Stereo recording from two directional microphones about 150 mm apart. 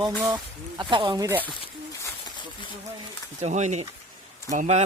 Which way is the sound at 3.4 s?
50° right (ahead or behind).